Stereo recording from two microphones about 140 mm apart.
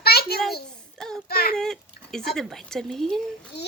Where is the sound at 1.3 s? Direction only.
90° left.